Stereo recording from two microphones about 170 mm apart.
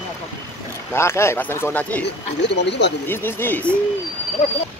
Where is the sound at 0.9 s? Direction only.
15° left (ahead or behind).